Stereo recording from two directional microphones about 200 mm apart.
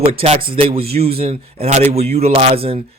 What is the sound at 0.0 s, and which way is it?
Speech, 30° right (ahead or behind).